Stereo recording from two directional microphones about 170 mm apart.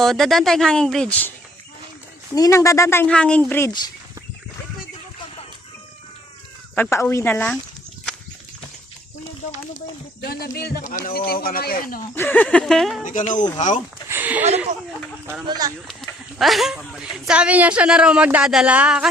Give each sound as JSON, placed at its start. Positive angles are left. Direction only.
{"t": 0.0, "sound": "speech", "side_deg": 0}
{"t": 2.3, "sound": "a woman's voice", "side_deg": 20}
{"t": 6.9, "sound": "a woman's voice", "side_deg": 15}
{"t": 10.6, "sound": "speech", "side_deg": 65}
{"t": 12.1, "sound": "speech", "side_deg": 10}
{"t": 13.1, "sound": "speech", "side_deg": 50}
{"t": 14.1, "sound": "a sound", "side_deg": -10}
{"t": 15.4, "sound": "speech", "side_deg": -20}
{"t": 16.4, "sound": "speech", "side_deg": 0}